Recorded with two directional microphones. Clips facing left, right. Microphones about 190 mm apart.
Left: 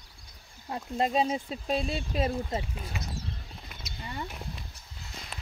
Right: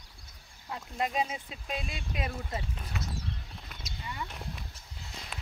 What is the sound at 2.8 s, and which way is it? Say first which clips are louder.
Speech: left 1 dB; 10° left (ahead or behind).